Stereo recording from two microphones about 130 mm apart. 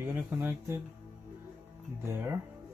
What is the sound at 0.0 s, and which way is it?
Speech, 15° right (ahead or behind).